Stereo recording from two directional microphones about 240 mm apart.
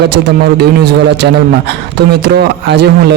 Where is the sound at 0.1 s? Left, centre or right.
Right.